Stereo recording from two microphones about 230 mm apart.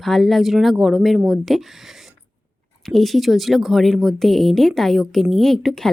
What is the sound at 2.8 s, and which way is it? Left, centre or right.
A woman's voice, centre.